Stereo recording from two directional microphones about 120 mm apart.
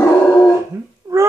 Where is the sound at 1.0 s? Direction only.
30° right (ahead or behind).